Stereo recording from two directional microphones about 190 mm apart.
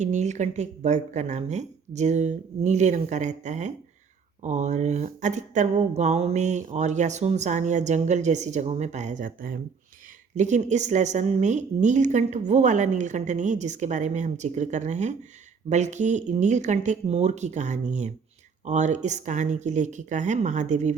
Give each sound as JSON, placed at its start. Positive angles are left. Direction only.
{"t": 0.0, "sound": "speech", "side_deg": -40}